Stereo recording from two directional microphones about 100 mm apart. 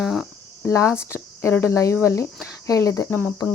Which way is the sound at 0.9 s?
25° left (ahead or behind).